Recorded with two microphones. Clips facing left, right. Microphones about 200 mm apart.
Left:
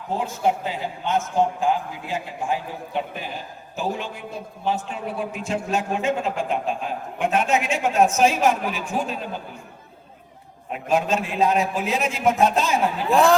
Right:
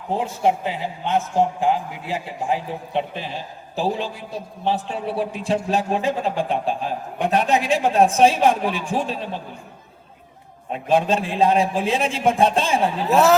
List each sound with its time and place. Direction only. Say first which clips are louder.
0.1 s a man's voice: right 2 dB; 30° right (ahead or behind)
10.7 s a man's voice: right 3 dB; 30° right (ahead or behind)
13.1 s speech: right 1 dB; 5° right (ahead or behind)